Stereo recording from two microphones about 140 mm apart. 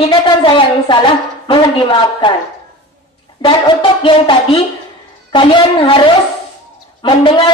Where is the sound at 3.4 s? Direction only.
35° left (ahead or behind).